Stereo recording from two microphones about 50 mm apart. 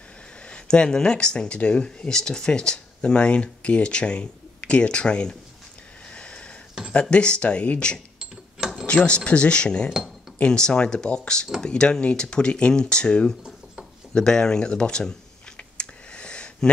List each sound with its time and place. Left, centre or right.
0.5 s speech: centre
6.0 s sniff: left
6.9 s speech: left
8.2 s a sound: centre
8.8 s speech: left
14.1 s a sound: centre